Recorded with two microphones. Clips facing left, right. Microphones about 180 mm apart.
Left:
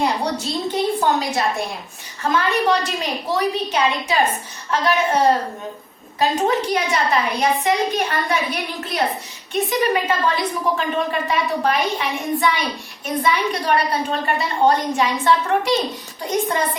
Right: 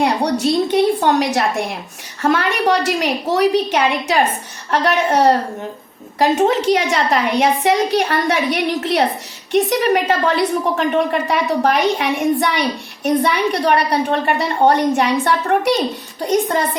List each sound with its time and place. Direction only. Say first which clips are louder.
0.0 s a woman's voice: right 5 dB; 70° right (ahead or behind); by 1.6 s 90° right
2.2 s a woman's voice: right 3 dB; 70° right (ahead or behind)